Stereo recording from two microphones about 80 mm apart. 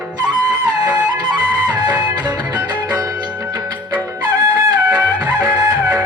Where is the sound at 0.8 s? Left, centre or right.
Centre.